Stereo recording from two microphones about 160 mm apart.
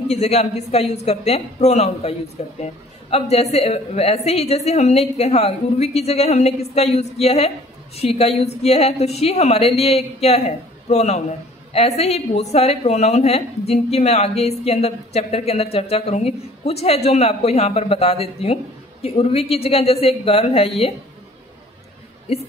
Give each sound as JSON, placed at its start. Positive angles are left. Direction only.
{"t": 0.1, "sound": "a woman's voice", "side_deg": 45}